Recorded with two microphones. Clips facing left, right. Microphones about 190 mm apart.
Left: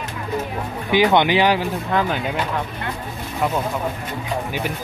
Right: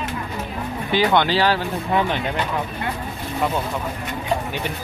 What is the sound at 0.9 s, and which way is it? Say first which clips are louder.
Speech: left 3 dB; 15° left (ahead or behind).